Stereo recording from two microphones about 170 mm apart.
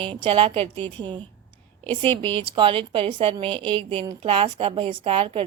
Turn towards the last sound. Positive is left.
turn(degrees=-30)  # may be behind; listen again after turning